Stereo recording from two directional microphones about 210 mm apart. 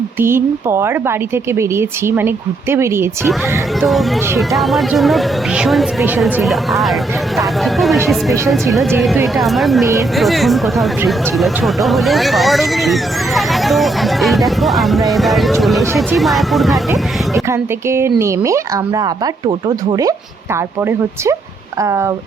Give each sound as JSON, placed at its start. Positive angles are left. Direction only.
{"t": 0.2, "sound": "speech", "side_deg": -10}
{"t": 3.8, "sound": "speech", "side_deg": 0}
{"t": 17.5, "sound": "speech", "side_deg": -15}
{"t": 21.8, "sound": "speech", "side_deg": -15}